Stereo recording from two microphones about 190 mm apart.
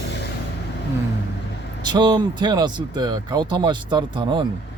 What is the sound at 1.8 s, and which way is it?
Speech, 20° right (ahead or behind).